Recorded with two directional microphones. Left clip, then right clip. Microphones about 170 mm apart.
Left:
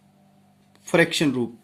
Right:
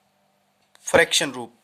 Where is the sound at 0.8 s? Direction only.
45° right (ahead or behind).